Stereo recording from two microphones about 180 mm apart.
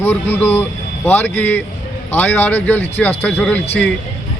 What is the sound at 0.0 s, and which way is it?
A man's voice, 10° left (ahead or behind).